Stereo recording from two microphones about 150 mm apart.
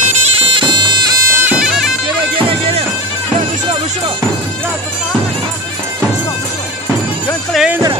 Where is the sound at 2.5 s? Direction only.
40° right (ahead or behind).